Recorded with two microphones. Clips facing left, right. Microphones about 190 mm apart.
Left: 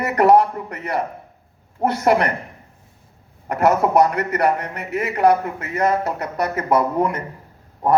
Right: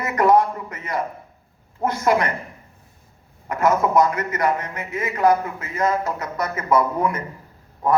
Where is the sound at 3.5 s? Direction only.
65° left (ahead or behind).